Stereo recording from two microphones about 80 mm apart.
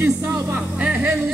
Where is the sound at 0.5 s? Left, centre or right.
Centre.